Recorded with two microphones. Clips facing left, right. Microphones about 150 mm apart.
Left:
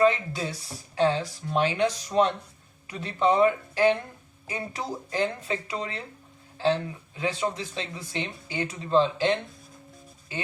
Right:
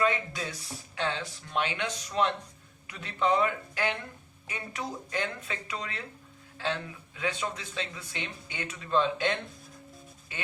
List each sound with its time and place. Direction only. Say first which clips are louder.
0.0 s speech: left 6 dB; 30° left (ahead or behind)